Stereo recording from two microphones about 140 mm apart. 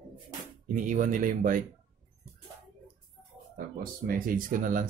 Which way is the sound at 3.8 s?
90° right.